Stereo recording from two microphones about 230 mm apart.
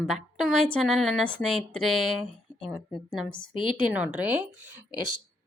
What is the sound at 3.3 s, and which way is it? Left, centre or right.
Speech, left.